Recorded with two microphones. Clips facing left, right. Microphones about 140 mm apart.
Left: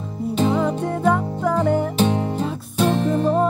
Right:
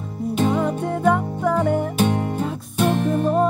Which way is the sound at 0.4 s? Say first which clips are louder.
Left 1 dB; 5° right (ahead or behind).